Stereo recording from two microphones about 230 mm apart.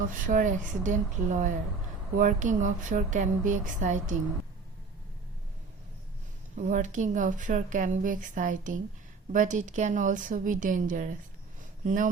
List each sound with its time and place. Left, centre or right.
0.1 s speech: right
6.6 s speech: right